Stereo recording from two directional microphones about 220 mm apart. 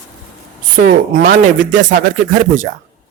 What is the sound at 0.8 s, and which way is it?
Speech, 40° right (ahead or behind).